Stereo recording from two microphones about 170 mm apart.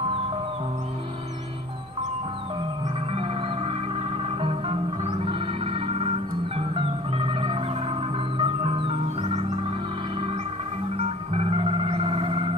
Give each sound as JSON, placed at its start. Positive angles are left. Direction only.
{"t": 3.1, "sound": "music", "side_deg": -35}
{"t": 11.0, "sound": "music", "side_deg": -35}